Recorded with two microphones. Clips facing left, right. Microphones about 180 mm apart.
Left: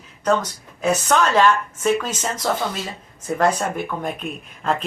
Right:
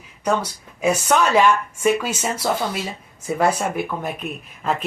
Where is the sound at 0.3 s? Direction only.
10° right (ahead or behind).